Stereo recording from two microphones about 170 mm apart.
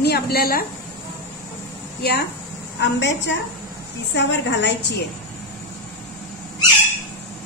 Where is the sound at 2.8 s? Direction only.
90° left.